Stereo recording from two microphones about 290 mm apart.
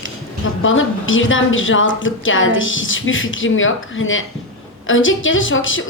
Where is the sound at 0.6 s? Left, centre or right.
Left.